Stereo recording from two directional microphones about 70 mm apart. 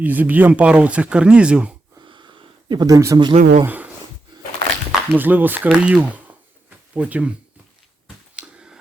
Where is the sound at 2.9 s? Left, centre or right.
Right.